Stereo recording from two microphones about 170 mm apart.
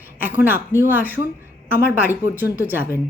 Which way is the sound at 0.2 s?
10° right (ahead or behind).